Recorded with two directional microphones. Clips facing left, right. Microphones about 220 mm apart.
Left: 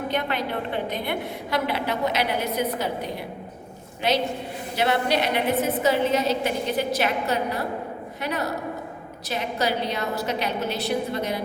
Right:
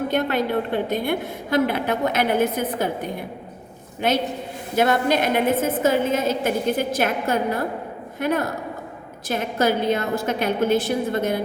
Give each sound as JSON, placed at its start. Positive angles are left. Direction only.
{"t": 0.1, "sound": "a woman's voice", "side_deg": -45}